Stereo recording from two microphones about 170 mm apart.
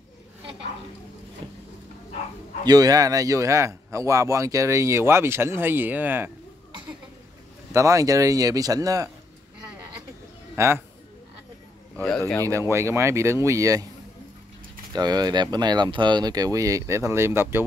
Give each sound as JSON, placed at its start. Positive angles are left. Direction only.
{"t": 2.6, "sound": "speech", "side_deg": -20}
{"t": 7.7, "sound": "speech", "side_deg": -20}
{"t": 10.5, "sound": "bird", "side_deg": -15}
{"t": 12.4, "sound": "speech", "side_deg": -15}
{"t": 14.9, "sound": "speech", "side_deg": -25}